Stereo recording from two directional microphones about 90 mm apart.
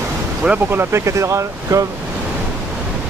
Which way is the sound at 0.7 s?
30° right (ahead or behind).